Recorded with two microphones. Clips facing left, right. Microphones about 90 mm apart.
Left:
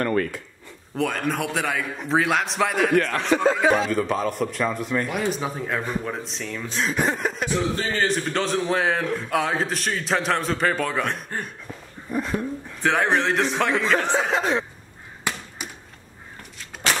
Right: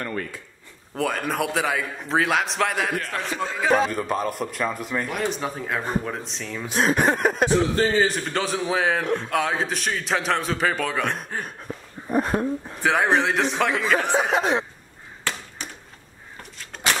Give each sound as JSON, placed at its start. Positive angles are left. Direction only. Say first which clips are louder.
{"t": 0.0, "sound": "a sound", "louder": "left 7 dB", "side_deg": 65}
{"t": 0.9, "sound": "a man's voice", "louder": "even", "side_deg": 0}
{"t": 3.0, "sound": "speech", "louder": "left 8 dB", "side_deg": 75}
{"t": 3.8, "sound": "a man's voice", "louder": "left 1 dB", "side_deg": -5}
{"t": 6.7, "sound": "a sound", "louder": "right 4 dB", "side_deg": -60}
{"t": 7.9, "sound": "a man's voice", "louder": "right 1 dB", "side_deg": -5}
{"t": 12.1, "sound": "speech", "louder": "right 4 dB", "side_deg": -45}
{"t": 12.8, "sound": "a man's voice", "louder": "right 1 dB", "side_deg": -5}
{"t": 15.3, "sound": "chop", "louder": "left 1 dB", "side_deg": 15}